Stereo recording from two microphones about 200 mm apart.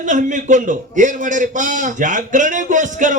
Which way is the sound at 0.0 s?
40° right (ahead or behind).